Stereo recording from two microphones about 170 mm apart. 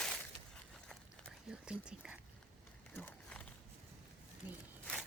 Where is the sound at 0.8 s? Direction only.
5° right (ahead or behind).